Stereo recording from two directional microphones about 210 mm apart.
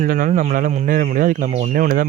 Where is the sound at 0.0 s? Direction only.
40° right (ahead or behind).